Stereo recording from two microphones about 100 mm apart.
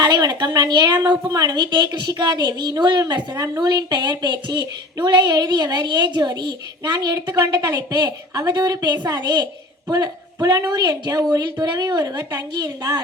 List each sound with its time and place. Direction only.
0.0 s a woman's voice: 40° right (ahead or behind)